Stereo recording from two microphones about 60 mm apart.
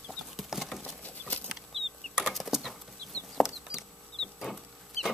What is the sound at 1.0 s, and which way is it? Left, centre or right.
Chicken, left.